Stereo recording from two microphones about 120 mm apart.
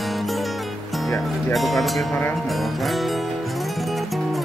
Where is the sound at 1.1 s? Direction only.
Centre (ahead or behind).